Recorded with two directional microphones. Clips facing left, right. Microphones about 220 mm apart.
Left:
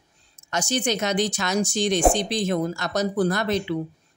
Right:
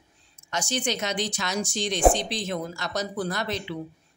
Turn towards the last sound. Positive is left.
turn(degrees=45)  # may be behind; listen again after turning